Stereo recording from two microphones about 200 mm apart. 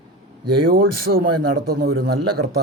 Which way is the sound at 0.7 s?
50° right (ahead or behind).